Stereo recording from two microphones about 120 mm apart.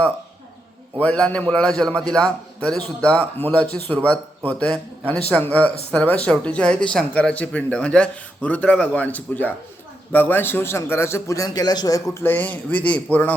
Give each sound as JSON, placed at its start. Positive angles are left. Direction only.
{"t": 0.9, "sound": "a man's voice", "side_deg": 10}